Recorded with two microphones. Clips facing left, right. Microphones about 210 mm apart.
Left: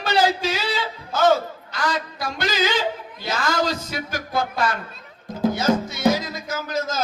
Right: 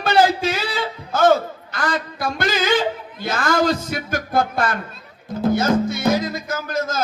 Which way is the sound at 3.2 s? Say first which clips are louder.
Right 4 dB; 50° right (ahead or behind).